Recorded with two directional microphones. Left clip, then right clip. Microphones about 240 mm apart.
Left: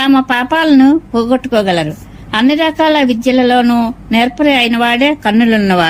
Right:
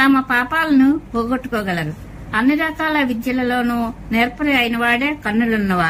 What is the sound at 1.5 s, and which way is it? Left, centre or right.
Speech, left.